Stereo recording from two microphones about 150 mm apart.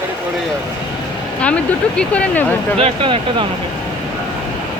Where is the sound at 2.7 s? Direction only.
40° right (ahead or behind).